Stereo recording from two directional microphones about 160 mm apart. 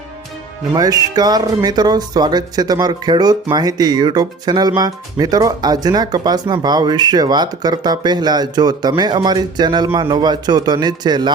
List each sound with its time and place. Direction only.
0.7 s speech: 25° right (ahead or behind)